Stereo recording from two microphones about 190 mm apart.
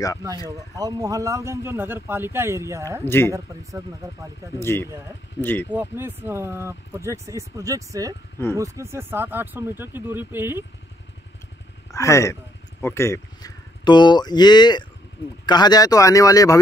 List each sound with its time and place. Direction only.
0.7 s speech: 20° right (ahead or behind)
3.1 s speech: 10° left (ahead or behind)
3.3 s speech: 15° right (ahead or behind)
4.6 s speech: 15° left (ahead or behind)
4.8 s speech: 15° right (ahead or behind)
5.4 s speech: 10° left (ahead or behind)
5.7 s speech: 10° right (ahead or behind)
11.9 s speech: 15° left (ahead or behind)